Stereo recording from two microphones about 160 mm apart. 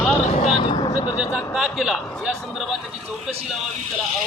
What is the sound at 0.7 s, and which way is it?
Speech, 30° left (ahead or behind).